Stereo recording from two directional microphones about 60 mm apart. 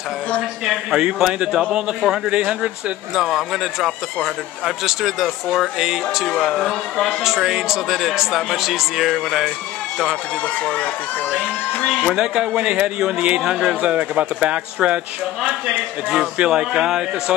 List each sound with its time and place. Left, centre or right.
0.7 s a man's voice: centre
6.2 s speech: centre
7.2 s a man's voice: centre
10.6 s speech: left
12.1 s speech: centre